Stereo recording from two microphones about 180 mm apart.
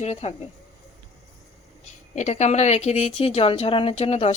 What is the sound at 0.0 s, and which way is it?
Speech, 35° left (ahead or behind).